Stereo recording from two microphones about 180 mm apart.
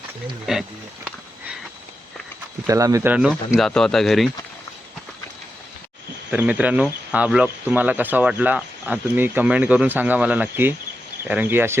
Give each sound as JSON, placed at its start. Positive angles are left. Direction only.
{"t": 0.5, "sound": "speech", "side_deg": -5}
{"t": 2.6, "sound": "speech", "side_deg": -20}
{"t": 6.3, "sound": "speech", "side_deg": -10}